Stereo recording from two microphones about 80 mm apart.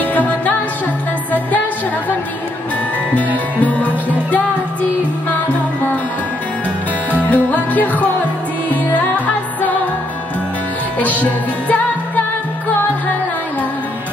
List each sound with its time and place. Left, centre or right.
0.0 s music: left
3.5 s music: centre
7.1 s music: left
11.0 s music: centre